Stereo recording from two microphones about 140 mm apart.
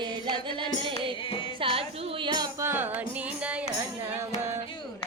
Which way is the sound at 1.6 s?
40° right (ahead or behind).